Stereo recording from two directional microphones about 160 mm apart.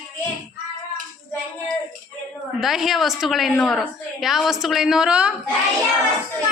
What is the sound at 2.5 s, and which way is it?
Speech, centre (ahead or behind).